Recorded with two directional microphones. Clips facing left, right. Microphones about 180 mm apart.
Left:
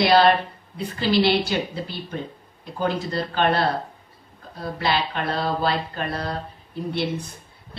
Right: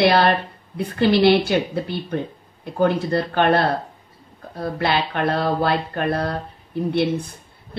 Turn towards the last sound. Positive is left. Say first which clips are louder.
# right 6 dB
turn(degrees=-60)  # may be behind; listen again after turning